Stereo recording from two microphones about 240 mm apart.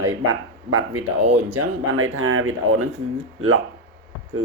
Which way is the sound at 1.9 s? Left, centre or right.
Right.